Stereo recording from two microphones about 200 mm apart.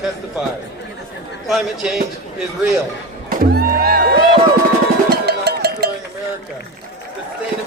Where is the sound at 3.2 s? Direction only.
50° right (ahead or behind).